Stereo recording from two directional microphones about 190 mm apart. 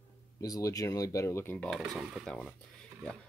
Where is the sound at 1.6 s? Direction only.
Centre (ahead or behind).